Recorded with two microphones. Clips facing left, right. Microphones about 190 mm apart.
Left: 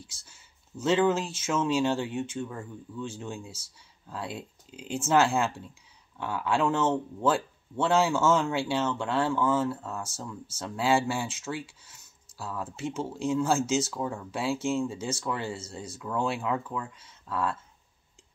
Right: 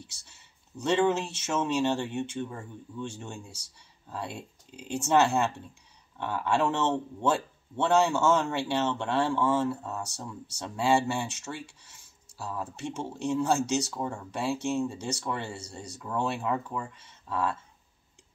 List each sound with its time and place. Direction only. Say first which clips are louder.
0.0 s speech: right 1 dB; centre (ahead or behind)
2.9 s speech: even; 25° right (ahead or behind)
3.3 s speech: left 4 dB; centre (ahead or behind)